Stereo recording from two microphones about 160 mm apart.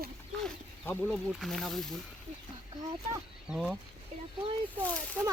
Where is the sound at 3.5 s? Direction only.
5° right (ahead or behind).